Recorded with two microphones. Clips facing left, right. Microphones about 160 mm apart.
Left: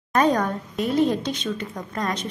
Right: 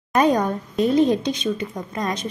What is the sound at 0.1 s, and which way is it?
A woman's voice, 15° right (ahead or behind).